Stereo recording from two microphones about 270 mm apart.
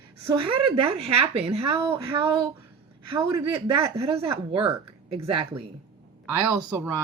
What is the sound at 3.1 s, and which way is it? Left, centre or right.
Speech, right.